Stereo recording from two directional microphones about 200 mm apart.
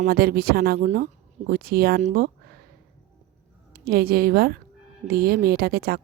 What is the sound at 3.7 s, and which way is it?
Speech, 50° right (ahead or behind).